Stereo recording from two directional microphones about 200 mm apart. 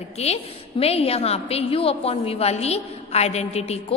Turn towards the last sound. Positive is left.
turn(degrees=30)  # may be behind; listen again after turning